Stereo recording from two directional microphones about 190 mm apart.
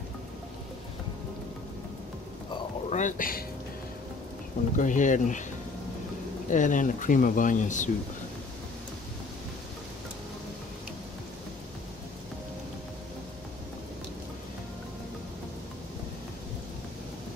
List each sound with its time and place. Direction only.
2.9 s speech: 40° left (ahead or behind)
4.7 s speech: 40° left (ahead or behind)
6.5 s speech: 40° left (ahead or behind)